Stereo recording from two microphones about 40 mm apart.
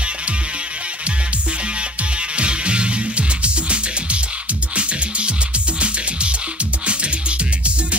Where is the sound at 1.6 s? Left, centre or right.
Right.